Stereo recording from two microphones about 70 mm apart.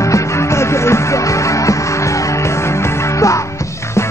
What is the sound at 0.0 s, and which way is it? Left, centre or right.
Music, left.